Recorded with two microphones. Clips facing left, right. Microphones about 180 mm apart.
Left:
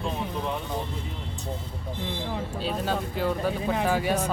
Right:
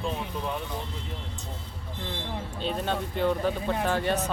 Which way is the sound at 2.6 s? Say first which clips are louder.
Even; 5° left (ahead or behind).